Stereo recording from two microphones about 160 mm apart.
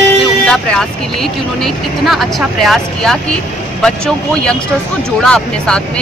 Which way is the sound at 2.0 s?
Centre (ahead or behind).